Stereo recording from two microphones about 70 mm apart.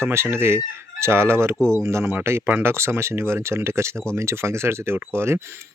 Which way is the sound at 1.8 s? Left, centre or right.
Right.